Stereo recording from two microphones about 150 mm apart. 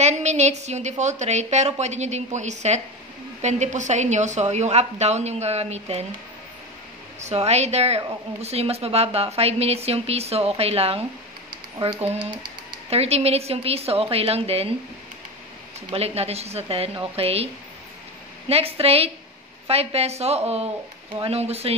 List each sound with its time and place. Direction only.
0.0 s a woman's voice: 50° right (ahead or behind)
7.2 s a woman's voice: 45° right (ahead or behind)
12.9 s a woman's voice: 45° right (ahead or behind)
15.9 s a woman's voice: 45° right (ahead or behind)
18.5 s a woman's voice: 40° right (ahead or behind)